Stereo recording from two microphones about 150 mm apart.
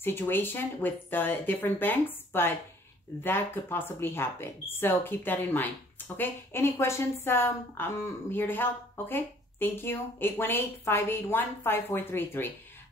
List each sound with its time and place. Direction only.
0.0 s a woman's voice: 15° left (ahead or behind)